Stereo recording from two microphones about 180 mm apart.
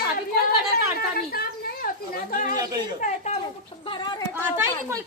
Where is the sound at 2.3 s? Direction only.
50° left (ahead or behind).